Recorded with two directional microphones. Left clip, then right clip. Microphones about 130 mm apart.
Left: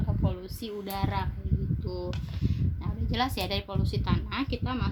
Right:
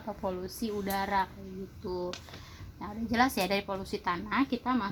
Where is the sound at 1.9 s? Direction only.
10° right (ahead or behind).